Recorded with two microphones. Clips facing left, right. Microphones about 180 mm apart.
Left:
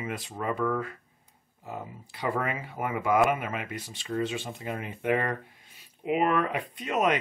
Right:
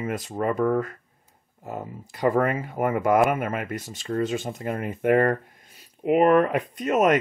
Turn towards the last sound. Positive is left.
turn(degrees=-45)  # may be behind; listen again after turning